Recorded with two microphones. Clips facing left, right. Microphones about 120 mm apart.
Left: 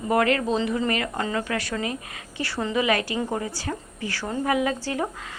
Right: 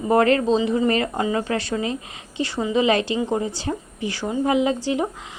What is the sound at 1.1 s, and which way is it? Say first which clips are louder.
A woman's voice: right 4 dB; 15° right (ahead or behind).